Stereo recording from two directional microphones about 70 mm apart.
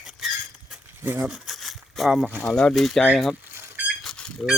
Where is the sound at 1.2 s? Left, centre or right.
Centre.